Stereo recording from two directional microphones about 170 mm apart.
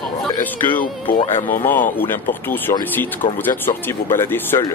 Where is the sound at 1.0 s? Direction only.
30° left (ahead or behind).